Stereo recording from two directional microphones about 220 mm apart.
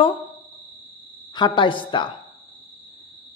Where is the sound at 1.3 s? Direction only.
20° left (ahead or behind).